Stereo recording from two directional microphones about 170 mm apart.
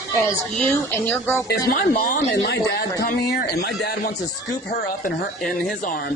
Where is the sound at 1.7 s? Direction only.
65° left (ahead or behind); by 2.9 s 85° left.